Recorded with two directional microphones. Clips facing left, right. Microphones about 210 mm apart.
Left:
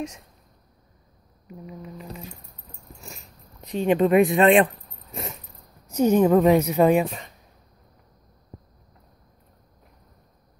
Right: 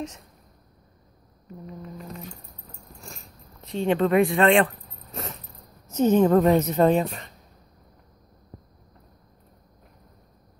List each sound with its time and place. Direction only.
1.5 s a woman's voice: 10° left (ahead or behind)
3.6 s speech: 15° left (ahead or behind)
5.1 s a sound: 10° left (ahead or behind)
5.9 s a woman's voice: 10° left (ahead or behind)